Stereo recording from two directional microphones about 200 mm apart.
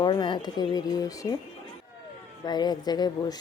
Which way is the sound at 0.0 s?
25° left (ahead or behind).